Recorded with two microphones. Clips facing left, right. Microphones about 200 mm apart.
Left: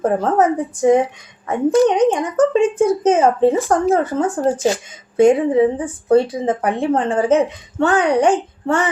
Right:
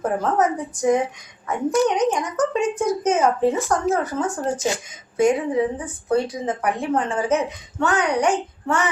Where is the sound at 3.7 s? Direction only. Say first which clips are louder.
Left 5 dB; 50° left (ahead or behind).